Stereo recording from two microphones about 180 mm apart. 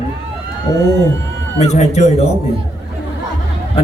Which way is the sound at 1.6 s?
40° left (ahead or behind).